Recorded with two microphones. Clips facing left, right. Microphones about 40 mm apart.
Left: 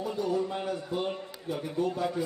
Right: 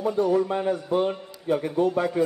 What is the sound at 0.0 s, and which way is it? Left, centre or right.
A man's voice, right.